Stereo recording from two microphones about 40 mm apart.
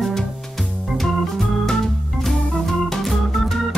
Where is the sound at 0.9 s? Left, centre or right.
Centre.